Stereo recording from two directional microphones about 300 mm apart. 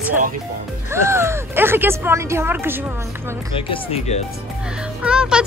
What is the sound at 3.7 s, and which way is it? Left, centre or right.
Speech, left.